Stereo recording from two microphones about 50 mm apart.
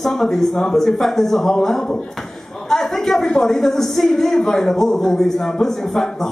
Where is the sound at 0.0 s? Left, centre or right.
Centre.